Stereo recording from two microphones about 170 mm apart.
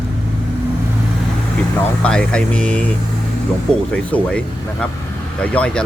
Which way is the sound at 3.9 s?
5° left (ahead or behind).